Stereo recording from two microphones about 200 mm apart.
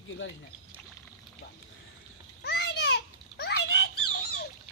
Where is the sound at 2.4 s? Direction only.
55° left (ahead or behind).